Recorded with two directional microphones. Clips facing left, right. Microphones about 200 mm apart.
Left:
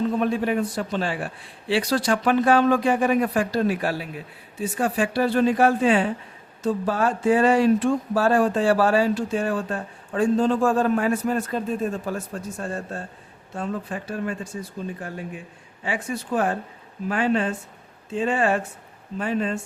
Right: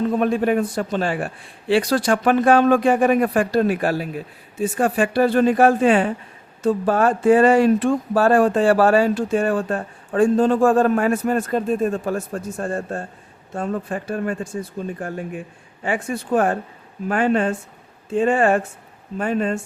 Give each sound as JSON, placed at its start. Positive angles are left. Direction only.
{"t": 0.1, "sound": "speech", "side_deg": -50}
{"t": 15.8, "sound": "speech", "side_deg": -50}